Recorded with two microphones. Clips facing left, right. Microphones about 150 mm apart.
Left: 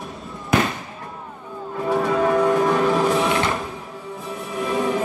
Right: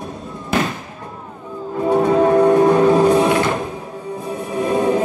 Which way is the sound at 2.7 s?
40° right (ahead or behind).